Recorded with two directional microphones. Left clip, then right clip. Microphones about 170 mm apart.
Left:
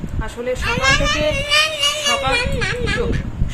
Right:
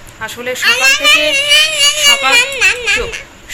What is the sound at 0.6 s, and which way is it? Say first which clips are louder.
Speech: right 8 dB; 15° left (ahead or behind).